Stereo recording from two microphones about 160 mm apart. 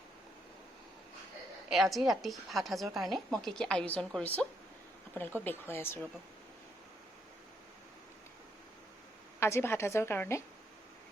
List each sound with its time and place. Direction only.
1.7 s a woman's voice: centre (ahead or behind)
9.4 s a woman's voice: 15° left (ahead or behind)